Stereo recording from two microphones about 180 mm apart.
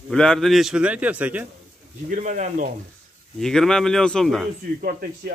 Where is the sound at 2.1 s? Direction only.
45° right (ahead or behind).